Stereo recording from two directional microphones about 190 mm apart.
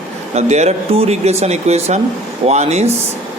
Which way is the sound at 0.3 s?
35° right (ahead or behind).